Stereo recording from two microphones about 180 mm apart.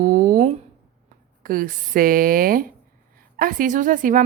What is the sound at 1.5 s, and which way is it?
A woman's voice, 50° right (ahead or behind).